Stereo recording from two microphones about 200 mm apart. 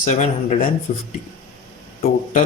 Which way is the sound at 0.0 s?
35° left (ahead or behind).